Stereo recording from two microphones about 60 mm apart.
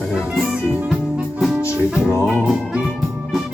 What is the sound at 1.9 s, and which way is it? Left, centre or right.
Music, centre.